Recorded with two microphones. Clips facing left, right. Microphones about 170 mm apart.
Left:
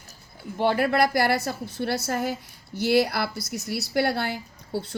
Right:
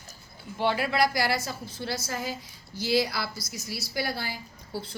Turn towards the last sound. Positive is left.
turn(degrees=60)  # may be behind; listen again after turning